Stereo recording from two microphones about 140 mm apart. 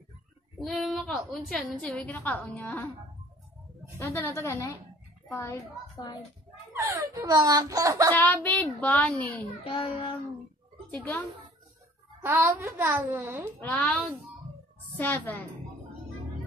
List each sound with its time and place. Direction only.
0.7 s a woman's voice: centre (ahead or behind)
4.0 s a woman's voice: 15° left (ahead or behind)
6.7 s speech: 20° right (ahead or behind)
8.1 s a woman's voice: 15° left (ahead or behind)
9.6 s child singing: 40° left (ahead or behind)
10.9 s a woman's voice: 10° left (ahead or behind)
12.2 s a child's voice: 15° right (ahead or behind)
13.6 s a woman's voice: 10° left (ahead or behind)